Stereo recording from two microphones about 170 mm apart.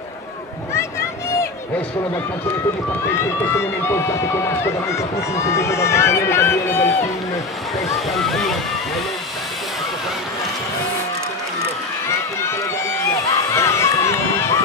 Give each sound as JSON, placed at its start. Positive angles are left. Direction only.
{"t": 3.1, "sound": "speech", "side_deg": 15}
{"t": 8.1, "sound": "speech", "side_deg": 0}
{"t": 13.6, "sound": "run", "side_deg": 15}